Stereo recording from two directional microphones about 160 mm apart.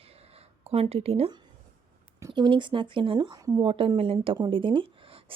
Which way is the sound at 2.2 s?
30° right (ahead or behind).